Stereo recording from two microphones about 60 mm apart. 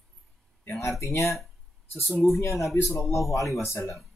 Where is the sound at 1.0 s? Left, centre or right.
Left.